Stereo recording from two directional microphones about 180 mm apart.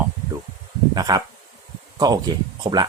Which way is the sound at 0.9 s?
20° right (ahead or behind).